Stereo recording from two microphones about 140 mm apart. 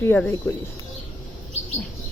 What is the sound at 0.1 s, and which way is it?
Speech, 15° left (ahead or behind).